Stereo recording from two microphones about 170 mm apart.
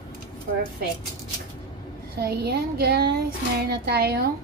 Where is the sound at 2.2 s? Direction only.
70° right (ahead or behind).